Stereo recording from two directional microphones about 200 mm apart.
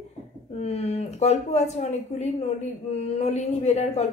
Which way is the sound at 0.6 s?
30° left (ahead or behind).